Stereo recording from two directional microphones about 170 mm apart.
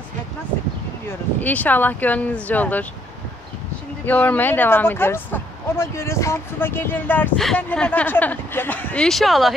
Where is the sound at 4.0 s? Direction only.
10° left (ahead or behind).